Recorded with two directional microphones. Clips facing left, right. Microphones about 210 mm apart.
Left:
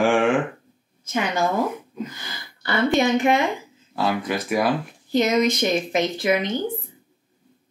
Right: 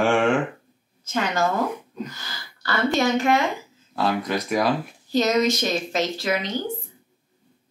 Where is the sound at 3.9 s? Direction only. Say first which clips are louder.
Even; centre (ahead or behind).